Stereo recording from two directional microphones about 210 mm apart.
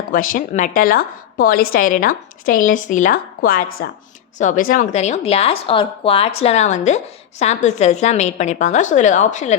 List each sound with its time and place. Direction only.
0.1 s speech: 40° left (ahead or behind)